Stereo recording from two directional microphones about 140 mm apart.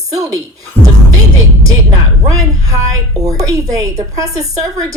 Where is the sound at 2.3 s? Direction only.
25° right (ahead or behind).